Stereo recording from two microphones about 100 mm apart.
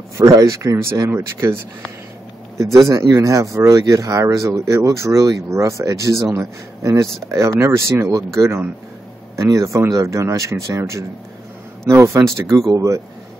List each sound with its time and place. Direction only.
0.2 s speech: 35° right (ahead or behind)